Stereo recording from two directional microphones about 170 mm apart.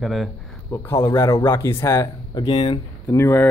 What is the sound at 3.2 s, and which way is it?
Speech, 15° left (ahead or behind).